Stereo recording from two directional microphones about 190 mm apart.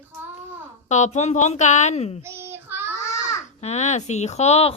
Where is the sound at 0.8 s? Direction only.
35° left (ahead or behind).